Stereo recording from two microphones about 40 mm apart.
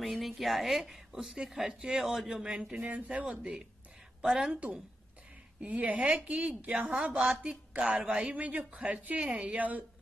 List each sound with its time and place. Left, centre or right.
0.0 s a woman's voice: centre
2.8 s a woman's voice: right
3.3 s a man's voice: centre
5.6 s a woman's voice: right